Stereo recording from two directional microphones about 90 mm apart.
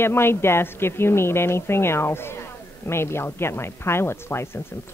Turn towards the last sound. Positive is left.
turn(degrees=25)  # may be behind; listen again after turning